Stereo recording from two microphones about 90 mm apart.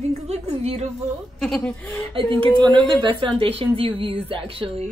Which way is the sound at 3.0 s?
80° right.